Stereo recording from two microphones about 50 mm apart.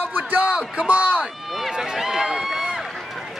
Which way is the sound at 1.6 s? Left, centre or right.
Centre.